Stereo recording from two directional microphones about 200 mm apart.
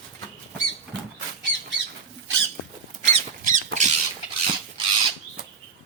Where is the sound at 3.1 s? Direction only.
35° right (ahead or behind).